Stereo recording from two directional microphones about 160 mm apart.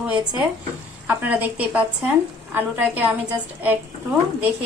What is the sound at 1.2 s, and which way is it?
A woman's voice, 10° right (ahead or behind).